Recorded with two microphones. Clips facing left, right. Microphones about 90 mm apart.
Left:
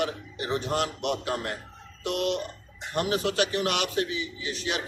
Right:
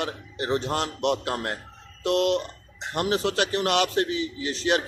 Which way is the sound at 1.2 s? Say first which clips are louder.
Right 2 dB; 45° right (ahead or behind).